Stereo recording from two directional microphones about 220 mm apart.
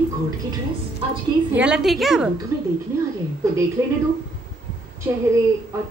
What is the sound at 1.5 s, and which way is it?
Speech, 5° right (ahead or behind).